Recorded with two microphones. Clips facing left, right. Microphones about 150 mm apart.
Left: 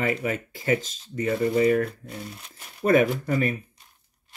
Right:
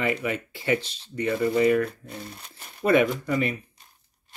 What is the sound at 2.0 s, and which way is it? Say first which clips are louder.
Speech: left 1 dB; centre (ahead or behind).